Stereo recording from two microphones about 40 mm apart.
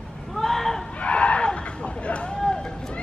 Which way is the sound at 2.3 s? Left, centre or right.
Centre.